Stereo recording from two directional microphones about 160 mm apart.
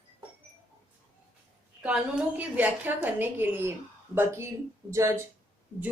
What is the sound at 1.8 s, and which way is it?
A woman's voice, 10° right (ahead or behind).